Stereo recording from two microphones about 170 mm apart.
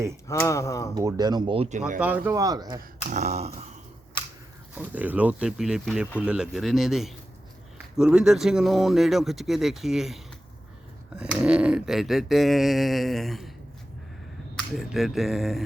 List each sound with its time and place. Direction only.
0.3 s speech: 20° left (ahead or behind)
0.9 s speech: 20° right (ahead or behind)
2.0 s speech: 10° right (ahead or behind)
3.1 s a sound: 40° right (ahead or behind)
4.7 s speech: 10° right (ahead or behind)
14.5 s speech: centre (ahead or behind)